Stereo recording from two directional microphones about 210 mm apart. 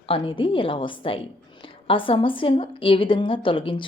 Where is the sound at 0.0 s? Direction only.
25° left (ahead or behind).